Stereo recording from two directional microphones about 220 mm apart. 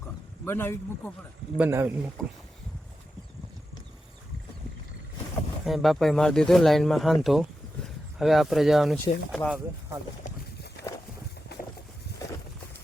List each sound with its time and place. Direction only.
0.4 s speech: 10° left (ahead or behind)
1.5 s speech: 10° right (ahead or behind)
5.6 s speech: centre (ahead or behind)
10.2 s a sound: 50° left (ahead or behind)